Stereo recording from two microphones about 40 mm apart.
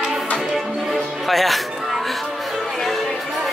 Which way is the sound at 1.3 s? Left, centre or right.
Centre.